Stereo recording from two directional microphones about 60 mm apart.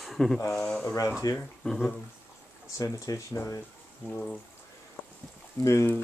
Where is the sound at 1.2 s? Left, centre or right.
Left.